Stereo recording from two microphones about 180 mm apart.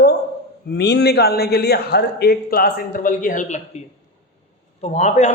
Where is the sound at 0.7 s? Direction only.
65° left (ahead or behind).